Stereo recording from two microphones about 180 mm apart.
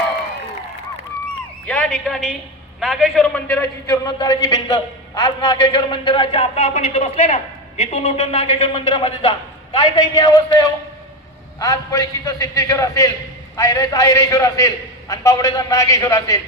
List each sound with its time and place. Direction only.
1.6 s a man's voice: 5° left (ahead or behind)
3.8 s a man's voice: 20° left (ahead or behind)
9.9 s a man's voice: 20° left (ahead or behind)